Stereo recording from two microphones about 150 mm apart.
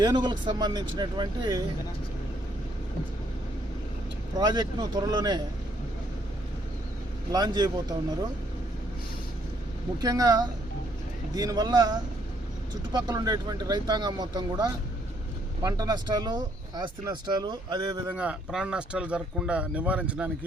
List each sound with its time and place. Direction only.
0.0 s speech: 30° right (ahead or behind)
4.4 s speech: 25° right (ahead or behind)
7.3 s speech: 25° right (ahead or behind)
10.0 s speech: 25° right (ahead or behind)
18.1 s speech: 10° right (ahead or behind)